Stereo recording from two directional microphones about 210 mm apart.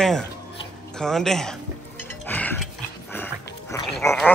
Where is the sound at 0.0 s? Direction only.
5° left (ahead or behind).